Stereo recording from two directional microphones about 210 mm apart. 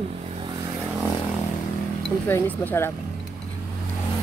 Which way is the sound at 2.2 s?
10° left (ahead or behind).